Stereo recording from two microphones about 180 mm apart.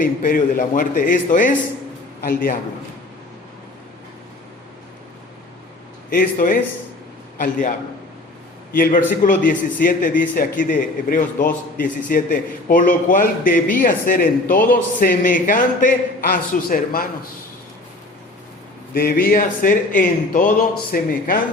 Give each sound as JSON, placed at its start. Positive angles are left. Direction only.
{"t": 0.0, "sound": "a man's voice", "side_deg": 50}
{"t": 6.1, "sound": "a man's voice", "side_deg": 50}
{"t": 8.7, "sound": "a man's voice", "side_deg": 50}
{"t": 18.9, "sound": "a man's voice", "side_deg": 55}